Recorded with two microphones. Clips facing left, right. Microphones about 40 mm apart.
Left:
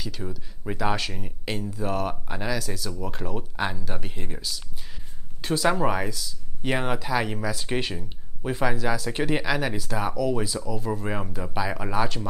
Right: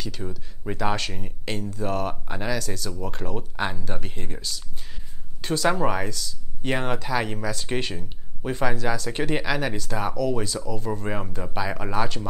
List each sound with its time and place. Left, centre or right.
0.0 s speech: centre